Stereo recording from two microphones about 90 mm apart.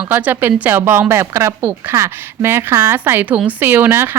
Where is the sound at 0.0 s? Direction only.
20° right (ahead or behind).